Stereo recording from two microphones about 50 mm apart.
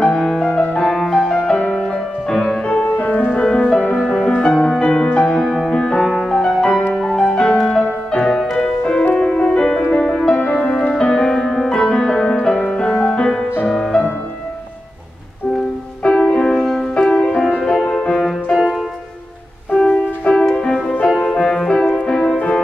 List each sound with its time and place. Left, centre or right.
0.0 s music: centre
0.5 s music: left
0.8 s music: centre
2.6 s music: left
3.3 s music: centre
6.0 s music: centre
16.0 s music: left
19.7 s music: left